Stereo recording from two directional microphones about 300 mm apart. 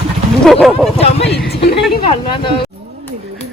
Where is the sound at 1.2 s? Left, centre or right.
Left.